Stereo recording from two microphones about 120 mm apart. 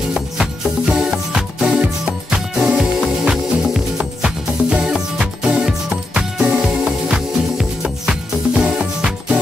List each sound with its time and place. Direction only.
0.1 s music: 5° right (ahead or behind)